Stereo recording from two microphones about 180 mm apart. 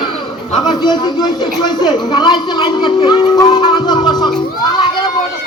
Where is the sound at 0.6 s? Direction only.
25° left (ahead or behind).